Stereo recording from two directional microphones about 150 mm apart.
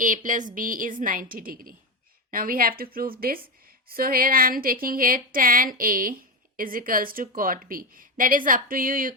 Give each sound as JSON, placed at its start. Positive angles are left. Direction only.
{"t": 0.0, "sound": "a woman's voice", "side_deg": -60}